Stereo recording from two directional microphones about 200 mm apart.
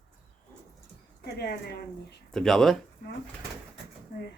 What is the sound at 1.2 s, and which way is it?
Speech, 55° left (ahead or behind).